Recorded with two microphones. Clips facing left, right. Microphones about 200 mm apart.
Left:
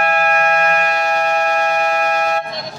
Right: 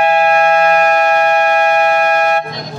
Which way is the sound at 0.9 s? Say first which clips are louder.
Right 6 dB; 55° right (ahead or behind).